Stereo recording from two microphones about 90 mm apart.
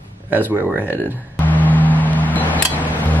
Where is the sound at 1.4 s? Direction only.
20° left (ahead or behind).